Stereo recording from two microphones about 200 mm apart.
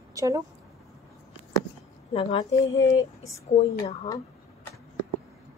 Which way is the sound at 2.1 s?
30° left (ahead or behind).